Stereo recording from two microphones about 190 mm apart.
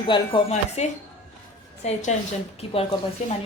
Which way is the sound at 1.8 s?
35° left (ahead or behind).